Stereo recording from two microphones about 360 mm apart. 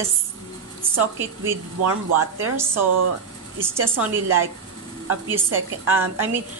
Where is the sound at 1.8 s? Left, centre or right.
Right.